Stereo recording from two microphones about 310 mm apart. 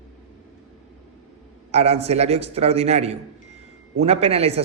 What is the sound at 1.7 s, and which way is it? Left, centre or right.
A man's voice, centre.